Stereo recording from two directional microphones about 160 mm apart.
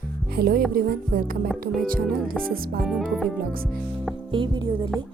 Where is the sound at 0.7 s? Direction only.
65° right (ahead or behind).